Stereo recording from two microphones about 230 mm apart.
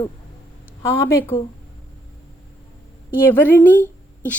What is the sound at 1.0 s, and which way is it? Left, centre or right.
Speech, centre.